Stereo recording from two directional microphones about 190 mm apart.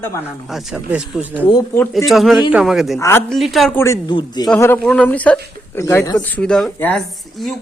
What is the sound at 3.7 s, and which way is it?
Speech, 15° left (ahead or behind).